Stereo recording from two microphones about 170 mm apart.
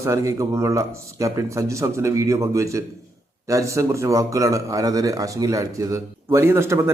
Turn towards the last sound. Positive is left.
turn(degrees=-15)  # may be behind; listen again after turning